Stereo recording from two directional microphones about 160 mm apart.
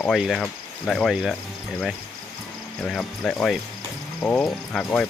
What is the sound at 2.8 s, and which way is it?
Speech, 5° left (ahead or behind).